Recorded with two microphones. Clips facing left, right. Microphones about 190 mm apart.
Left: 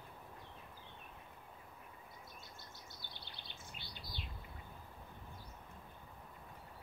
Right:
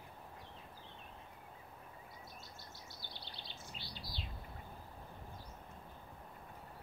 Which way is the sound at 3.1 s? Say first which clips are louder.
Right 3 dB; 55° left (ahead or behind).